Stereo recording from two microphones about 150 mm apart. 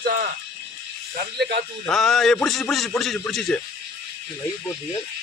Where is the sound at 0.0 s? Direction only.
75° right (ahead or behind).